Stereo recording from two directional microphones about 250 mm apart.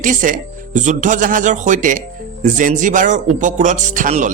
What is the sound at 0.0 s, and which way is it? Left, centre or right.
Speech, right.